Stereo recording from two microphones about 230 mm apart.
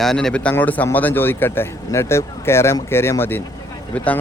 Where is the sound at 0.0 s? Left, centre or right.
Centre.